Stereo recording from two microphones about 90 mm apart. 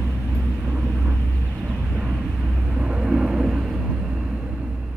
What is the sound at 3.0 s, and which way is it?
Vehicle, 10° right (ahead or behind).